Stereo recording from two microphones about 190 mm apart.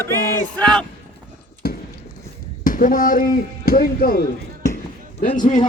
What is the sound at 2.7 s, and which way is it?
Speech, 45° left (ahead or behind).